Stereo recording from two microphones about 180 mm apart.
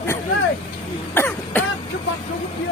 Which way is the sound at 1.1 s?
10° left (ahead or behind).